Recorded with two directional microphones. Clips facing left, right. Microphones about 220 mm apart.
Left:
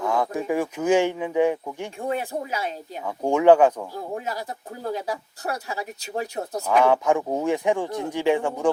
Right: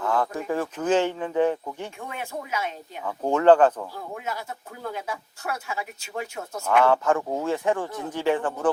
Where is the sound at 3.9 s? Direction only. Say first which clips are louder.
Left 3 dB; 35° left (ahead or behind).